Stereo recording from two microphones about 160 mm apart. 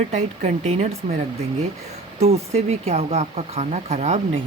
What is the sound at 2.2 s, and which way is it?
Speech, 40° right (ahead or behind).